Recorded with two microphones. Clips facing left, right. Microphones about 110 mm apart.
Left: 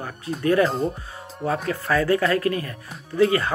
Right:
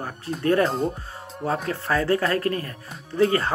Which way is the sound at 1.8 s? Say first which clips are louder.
Left 2 dB; 30° right (ahead or behind).